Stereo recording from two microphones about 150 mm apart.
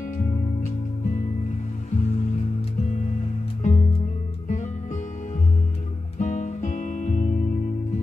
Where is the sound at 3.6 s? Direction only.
55° left (ahead or behind).